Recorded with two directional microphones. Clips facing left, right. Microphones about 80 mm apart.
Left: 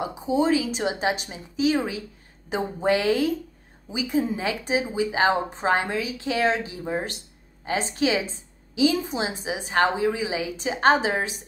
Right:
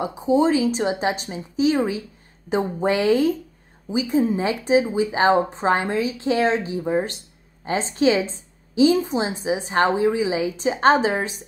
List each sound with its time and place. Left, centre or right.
0.0 s a woman's voice: right
3.0 s a woman's voice: right